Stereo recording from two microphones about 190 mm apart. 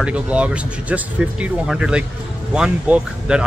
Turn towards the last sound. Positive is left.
turn(degrees=-5)  # may be behind; listen again after turning